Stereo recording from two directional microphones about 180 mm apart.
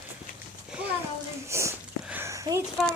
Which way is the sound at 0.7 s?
5° right (ahead or behind).